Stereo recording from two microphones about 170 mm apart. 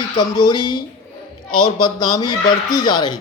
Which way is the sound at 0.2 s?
25° left (ahead or behind).